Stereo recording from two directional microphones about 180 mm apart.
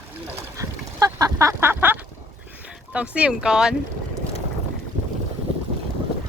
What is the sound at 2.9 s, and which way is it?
Speech, 5° right (ahead or behind).